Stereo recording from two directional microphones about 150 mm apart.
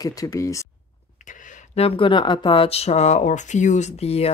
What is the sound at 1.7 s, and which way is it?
Speech, 40° left (ahead or behind).